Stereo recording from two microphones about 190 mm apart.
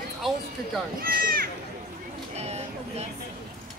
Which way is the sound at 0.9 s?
50° right (ahead or behind).